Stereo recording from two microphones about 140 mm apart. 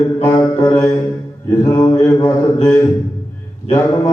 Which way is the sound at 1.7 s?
20° left (ahead or behind).